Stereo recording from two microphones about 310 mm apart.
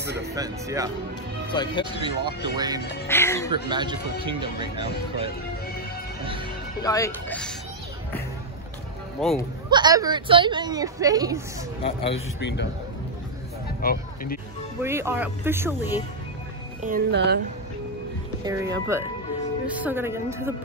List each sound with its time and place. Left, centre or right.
0.3 s a woman's voice: centre
1.5 s speech: centre
2.0 s a woman's voice: centre
3.1 s speech: centre
3.6 s a woman's voice: centre
6.8 s speech: centre
9.2 s speech: centre
9.7 s a woman's voice: centre
11.8 s speech: centre
12.4 s a man's voice: left
13.7 s speech: left
14.8 s a woman's voice: centre
16.8 s speech: right
18.4 s a woman's voice: centre